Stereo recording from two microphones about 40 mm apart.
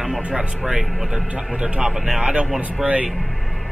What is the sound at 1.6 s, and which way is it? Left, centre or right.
Speech, right.